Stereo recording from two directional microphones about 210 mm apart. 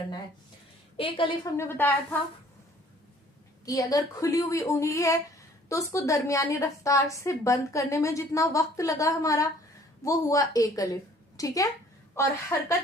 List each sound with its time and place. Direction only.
0.9 s a woman's voice: 25° left (ahead or behind)
1.5 s a woman's voice: 10° left (ahead or behind)
3.7 s a woman's voice: 15° left (ahead or behind)